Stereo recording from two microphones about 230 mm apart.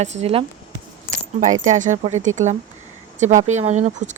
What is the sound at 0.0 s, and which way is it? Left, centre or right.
Speech, right.